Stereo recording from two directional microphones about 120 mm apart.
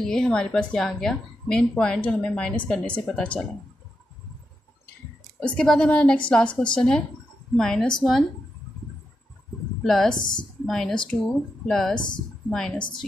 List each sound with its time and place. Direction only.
0.0 s a woman's voice: 5° left (ahead or behind)
5.4 s a woman's voice: 10° left (ahead or behind)
9.8 s a woman's voice: 5° left (ahead or behind)